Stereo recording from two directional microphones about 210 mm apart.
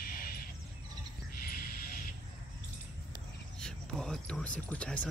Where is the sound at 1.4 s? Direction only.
45° left (ahead or behind).